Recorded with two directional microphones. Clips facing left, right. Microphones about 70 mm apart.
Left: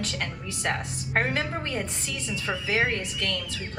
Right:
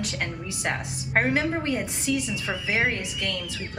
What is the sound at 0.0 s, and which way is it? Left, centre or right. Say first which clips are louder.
A woman's voice: right 1 dB; right.